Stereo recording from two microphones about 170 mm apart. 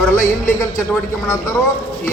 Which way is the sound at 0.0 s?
15° left (ahead or behind).